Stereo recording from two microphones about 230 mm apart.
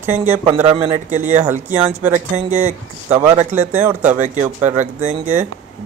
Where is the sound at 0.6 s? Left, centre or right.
Right.